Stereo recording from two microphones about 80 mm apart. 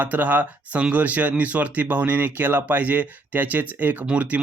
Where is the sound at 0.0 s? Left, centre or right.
Right.